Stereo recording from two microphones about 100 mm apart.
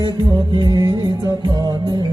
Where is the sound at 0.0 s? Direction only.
50° right (ahead or behind).